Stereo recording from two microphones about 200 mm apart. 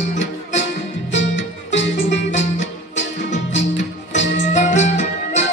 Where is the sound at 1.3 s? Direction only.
65° left (ahead or behind).